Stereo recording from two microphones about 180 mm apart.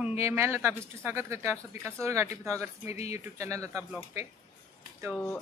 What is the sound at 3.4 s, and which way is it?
Speech, 15° right (ahead or behind).